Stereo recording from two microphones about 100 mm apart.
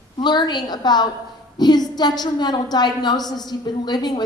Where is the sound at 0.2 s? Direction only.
45° left (ahead or behind).